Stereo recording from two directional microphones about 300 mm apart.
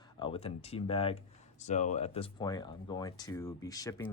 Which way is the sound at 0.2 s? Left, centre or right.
Centre.